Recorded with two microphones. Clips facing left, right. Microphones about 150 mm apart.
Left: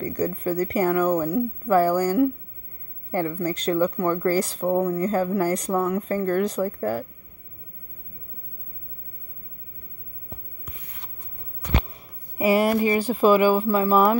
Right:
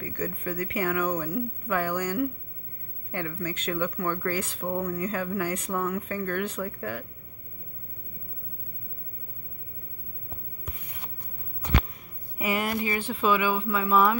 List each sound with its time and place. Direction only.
0.0 s speech: 35° left (ahead or behind)
12.4 s speech: 35° left (ahead or behind)